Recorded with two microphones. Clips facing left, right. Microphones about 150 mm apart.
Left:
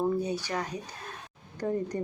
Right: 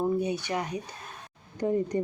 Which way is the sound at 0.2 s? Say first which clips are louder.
Right 2 dB; 15° right (ahead or behind).